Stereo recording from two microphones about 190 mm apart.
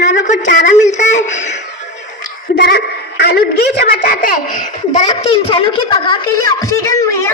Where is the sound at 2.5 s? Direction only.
60° left (ahead or behind); by 5.0 s 45° left (ahead or behind).